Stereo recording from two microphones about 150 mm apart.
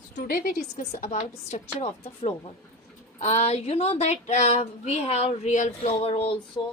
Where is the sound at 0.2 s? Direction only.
70° left (ahead or behind).